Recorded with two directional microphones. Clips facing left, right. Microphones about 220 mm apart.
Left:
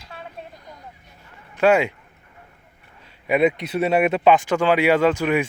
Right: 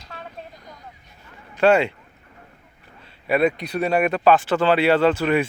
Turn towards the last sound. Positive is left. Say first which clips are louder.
# even
turn(degrees=10)  # may be behind; listen again after turning